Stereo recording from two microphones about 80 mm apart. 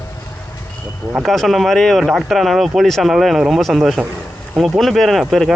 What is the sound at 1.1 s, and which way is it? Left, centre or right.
Speech, centre.